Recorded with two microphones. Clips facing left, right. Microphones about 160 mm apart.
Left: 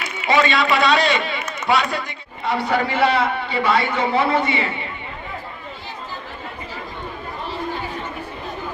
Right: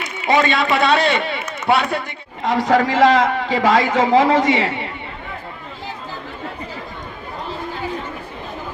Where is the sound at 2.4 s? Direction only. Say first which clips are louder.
Right 5 dB; 90° right.